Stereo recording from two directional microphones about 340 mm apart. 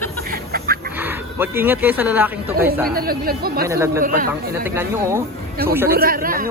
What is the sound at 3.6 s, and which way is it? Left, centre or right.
Speech, centre.